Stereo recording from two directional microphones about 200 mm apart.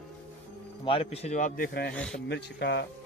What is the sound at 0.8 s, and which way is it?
A man's voice, 30° left (ahead or behind).